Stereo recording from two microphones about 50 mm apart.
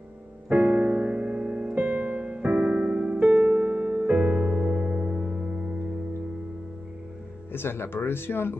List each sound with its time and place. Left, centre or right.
0.5 s music: right
1.8 s music: right; by 5.8 s centre
7.5 s speech: left